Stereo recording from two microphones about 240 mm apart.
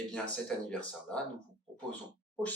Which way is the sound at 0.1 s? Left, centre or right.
Centre.